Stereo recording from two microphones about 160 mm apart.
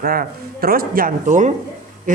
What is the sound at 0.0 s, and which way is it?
A man's voice, 65° right (ahead or behind).